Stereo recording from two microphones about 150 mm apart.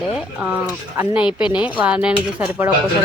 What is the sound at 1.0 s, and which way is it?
Speech, 10° right (ahead or behind).